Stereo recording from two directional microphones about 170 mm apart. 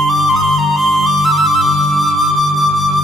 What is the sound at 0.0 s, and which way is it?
Music, centre (ahead or behind).